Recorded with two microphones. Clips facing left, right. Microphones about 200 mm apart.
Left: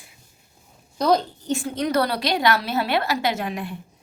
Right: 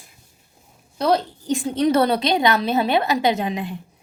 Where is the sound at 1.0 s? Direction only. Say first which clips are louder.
Even; centre (ahead or behind).